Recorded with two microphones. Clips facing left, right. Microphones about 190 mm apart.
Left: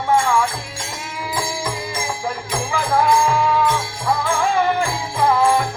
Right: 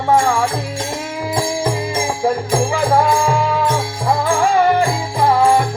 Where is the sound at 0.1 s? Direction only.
40° right (ahead or behind).